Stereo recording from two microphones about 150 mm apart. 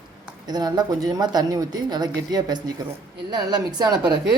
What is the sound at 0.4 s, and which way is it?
A woman's voice, 25° right (ahead or behind).